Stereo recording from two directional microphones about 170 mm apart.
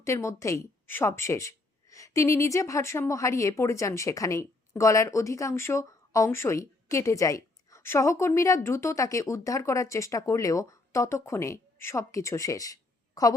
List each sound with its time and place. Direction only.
0.0 s a woman's voice: 15° left (ahead or behind)